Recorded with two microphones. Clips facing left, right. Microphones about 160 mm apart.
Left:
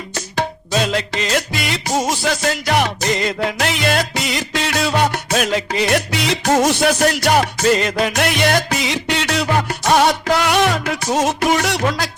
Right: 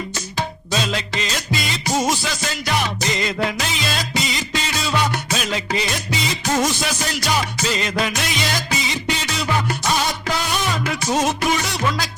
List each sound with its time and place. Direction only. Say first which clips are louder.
0.3 s music: left 5 dB; 55° left (ahead or behind)